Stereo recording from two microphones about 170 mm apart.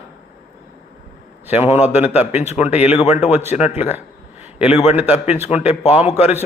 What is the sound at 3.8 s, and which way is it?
A man's voice, 10° right (ahead or behind).